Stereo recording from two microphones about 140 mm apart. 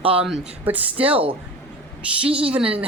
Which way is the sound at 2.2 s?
45° right (ahead or behind).